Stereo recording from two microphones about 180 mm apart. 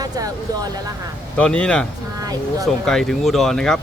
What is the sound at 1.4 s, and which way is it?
A man's voice, 5° left (ahead or behind).